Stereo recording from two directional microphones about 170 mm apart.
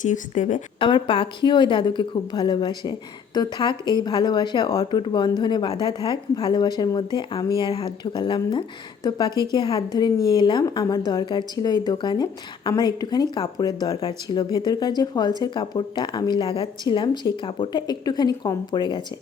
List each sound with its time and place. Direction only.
0.0 s speech: 45° left (ahead or behind)
0.8 s speech: 30° left (ahead or behind)